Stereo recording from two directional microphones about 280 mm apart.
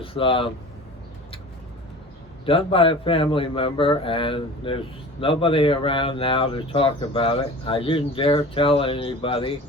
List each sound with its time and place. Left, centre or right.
0.0 s speech: centre
2.5 s speech: centre